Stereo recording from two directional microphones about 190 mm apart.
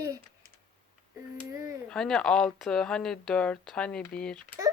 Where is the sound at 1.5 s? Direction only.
15° right (ahead or behind).